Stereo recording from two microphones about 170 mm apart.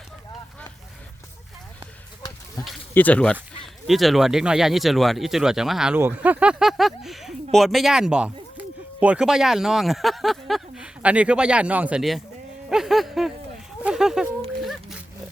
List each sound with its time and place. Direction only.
2.9 s speech: 10° left (ahead or behind)
12.7 s a sound: centre (ahead or behind)
14.6 s pig: centre (ahead or behind)